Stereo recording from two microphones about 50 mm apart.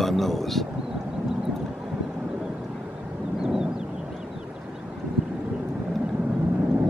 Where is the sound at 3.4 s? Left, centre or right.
Centre.